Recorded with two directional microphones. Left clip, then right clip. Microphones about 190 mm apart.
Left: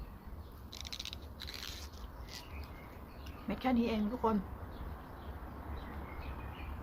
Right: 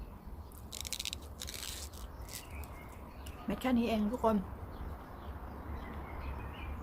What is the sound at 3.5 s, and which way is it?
Speech, 10° right (ahead or behind).